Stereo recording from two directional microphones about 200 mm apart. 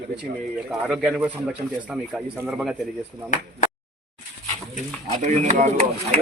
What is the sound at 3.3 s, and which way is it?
Speech, 40° left (ahead or behind).